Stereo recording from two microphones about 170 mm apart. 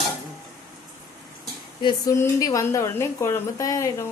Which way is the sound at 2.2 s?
20° left (ahead or behind).